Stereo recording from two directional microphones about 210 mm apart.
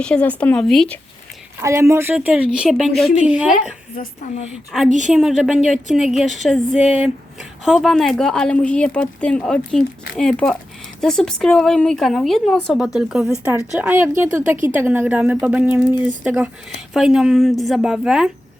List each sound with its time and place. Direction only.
0.0 s speech: 5° left (ahead or behind)
1.6 s speech: 15° right (ahead or behind)
3.9 s a woman's voice: 35° left (ahead or behind)
5.0 s a woman's voice: centre (ahead or behind)